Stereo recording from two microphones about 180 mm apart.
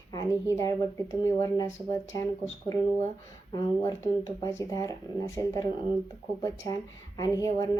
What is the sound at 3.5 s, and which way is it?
Speech, 20° left (ahead or behind).